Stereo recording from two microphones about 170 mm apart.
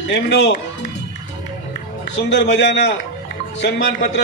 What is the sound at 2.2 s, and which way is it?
A man's voice, 85° left.